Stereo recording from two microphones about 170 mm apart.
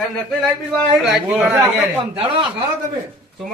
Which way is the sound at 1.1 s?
5° right (ahead or behind).